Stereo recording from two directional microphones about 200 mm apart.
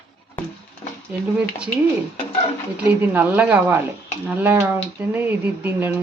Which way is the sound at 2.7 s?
10° right (ahead or behind).